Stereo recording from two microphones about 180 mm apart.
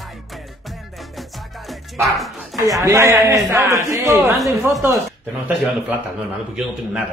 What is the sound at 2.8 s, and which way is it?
A man's voice, 15° right (ahead or behind).